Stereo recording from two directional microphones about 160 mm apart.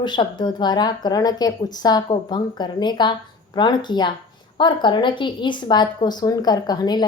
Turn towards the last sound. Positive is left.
turn(degrees=25)  # may be behind; listen again after turning